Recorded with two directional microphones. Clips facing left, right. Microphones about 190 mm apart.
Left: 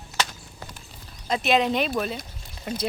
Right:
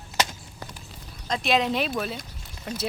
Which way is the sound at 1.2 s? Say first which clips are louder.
Left 2 dB; 5° left (ahead or behind).